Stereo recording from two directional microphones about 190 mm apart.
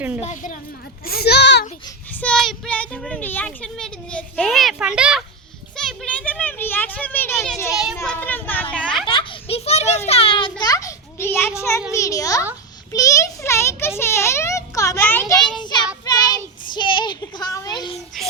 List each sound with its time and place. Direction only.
0.2 s a woman's voice: 40° left (ahead or behind)
1.0 s a child's voice: 55° left (ahead or behind)
2.1 s speech: 5° left (ahead or behind)
5.7 s a sound: centre (ahead or behind)
7.7 s speech: 5° right (ahead or behind)
8.0 s a child's voice: 10° left (ahead or behind)
8.7 s children playing: 5° left (ahead or behind)
9.0 s children playing: 30° left (ahead or behind)
10.6 s a sound: 20° left (ahead or behind)
11.9 s a child's voice: 15° left (ahead or behind)
15.5 s child singing: 25° left (ahead or behind)
16.0 s a sound: 20° left (ahead or behind)
18.2 s child singing: centre (ahead or behind)